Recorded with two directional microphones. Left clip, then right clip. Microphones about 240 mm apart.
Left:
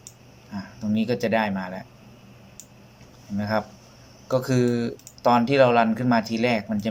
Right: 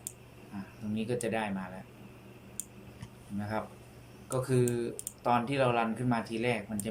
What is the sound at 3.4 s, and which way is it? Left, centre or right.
Speech, left.